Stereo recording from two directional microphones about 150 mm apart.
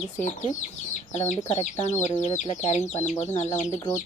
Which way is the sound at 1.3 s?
50° left (ahead or behind).